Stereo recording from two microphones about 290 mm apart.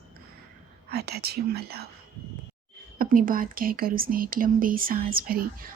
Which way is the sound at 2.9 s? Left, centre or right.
Right.